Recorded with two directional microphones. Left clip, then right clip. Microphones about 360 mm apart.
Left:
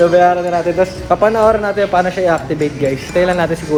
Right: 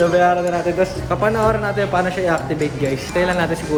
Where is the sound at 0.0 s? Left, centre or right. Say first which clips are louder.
Left 4 dB; centre.